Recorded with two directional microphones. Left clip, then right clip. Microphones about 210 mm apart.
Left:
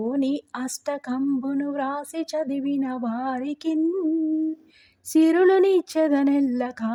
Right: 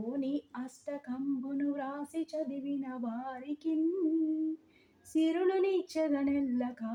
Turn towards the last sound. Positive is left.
turn(degrees=40)  # may be behind; listen again after turning